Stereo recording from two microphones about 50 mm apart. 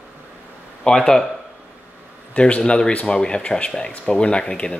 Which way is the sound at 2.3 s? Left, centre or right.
Left.